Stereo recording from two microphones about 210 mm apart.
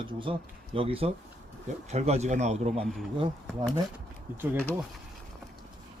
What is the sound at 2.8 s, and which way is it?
Speech, centre (ahead or behind).